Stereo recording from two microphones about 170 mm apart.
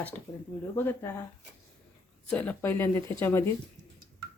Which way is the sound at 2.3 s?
10° left (ahead or behind).